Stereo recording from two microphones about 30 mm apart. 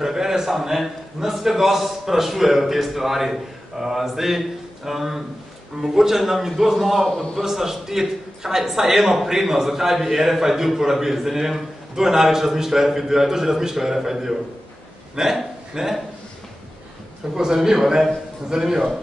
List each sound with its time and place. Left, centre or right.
0.0 s a man's voice: centre
17.4 s a man's voice: right